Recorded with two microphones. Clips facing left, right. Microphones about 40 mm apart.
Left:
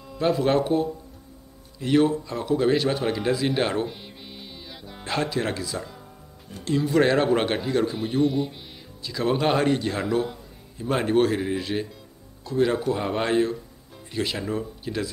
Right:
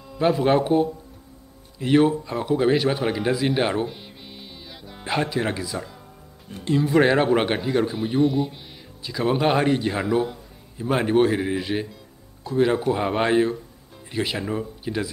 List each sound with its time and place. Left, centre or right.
0.4 s a man's voice: centre